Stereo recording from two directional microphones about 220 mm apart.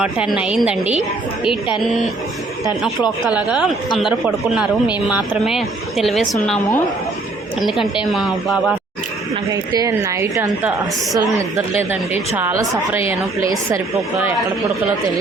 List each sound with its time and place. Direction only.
0.0 s speech: 5° right (ahead or behind)
3.2 s speech: 5° right (ahead or behind)
8.1 s speech: centre (ahead or behind)
9.7 s a woman's voice: 15° right (ahead or behind)